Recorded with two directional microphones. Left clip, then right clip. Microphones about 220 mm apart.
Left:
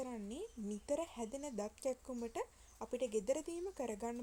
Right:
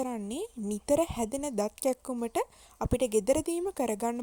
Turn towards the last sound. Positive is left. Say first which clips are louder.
# right 12 dB
turn(degrees=-40)  # may be behind; listen again after turning